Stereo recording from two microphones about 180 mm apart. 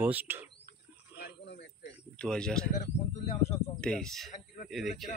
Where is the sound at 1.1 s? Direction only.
70° left (ahead or behind).